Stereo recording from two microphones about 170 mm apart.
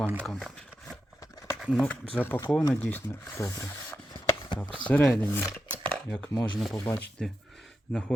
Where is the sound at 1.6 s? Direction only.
Centre (ahead or behind).